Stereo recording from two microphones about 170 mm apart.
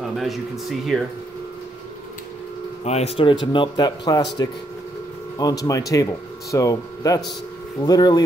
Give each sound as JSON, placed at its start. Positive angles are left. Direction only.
{"t": 0.2, "sound": "speech", "side_deg": 0}
{"t": 2.8, "sound": "a man's voice", "side_deg": 40}
{"t": 5.4, "sound": "a man's voice", "side_deg": 20}